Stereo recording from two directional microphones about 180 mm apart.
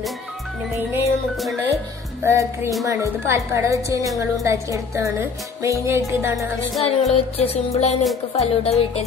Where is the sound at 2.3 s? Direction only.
15° right (ahead or behind).